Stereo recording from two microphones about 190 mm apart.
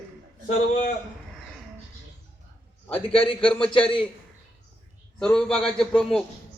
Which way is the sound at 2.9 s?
30° left (ahead or behind).